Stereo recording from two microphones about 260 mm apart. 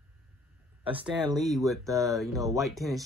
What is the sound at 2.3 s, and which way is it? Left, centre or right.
Speech, centre.